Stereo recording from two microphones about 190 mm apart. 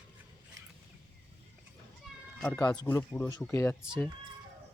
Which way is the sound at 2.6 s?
20° left (ahead or behind).